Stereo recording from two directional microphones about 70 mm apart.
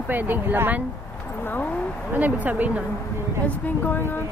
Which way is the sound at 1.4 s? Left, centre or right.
Left.